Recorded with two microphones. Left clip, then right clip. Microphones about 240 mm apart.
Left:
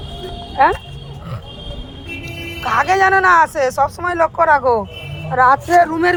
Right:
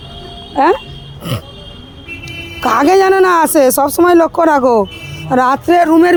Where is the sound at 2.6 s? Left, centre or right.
Right.